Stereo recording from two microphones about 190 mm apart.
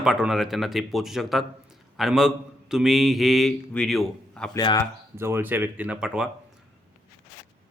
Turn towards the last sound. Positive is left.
turn(degrees=-5)  # may be behind; listen again after turning